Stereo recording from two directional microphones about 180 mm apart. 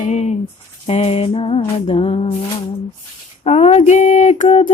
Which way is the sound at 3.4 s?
35° left (ahead or behind).